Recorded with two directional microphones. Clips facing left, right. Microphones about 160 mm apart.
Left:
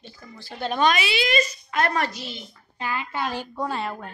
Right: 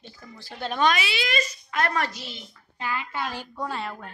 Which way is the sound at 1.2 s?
25° left (ahead or behind).